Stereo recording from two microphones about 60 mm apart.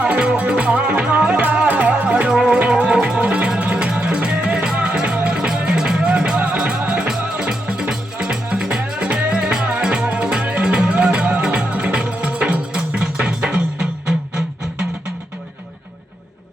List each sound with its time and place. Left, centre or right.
0.0 s music: centre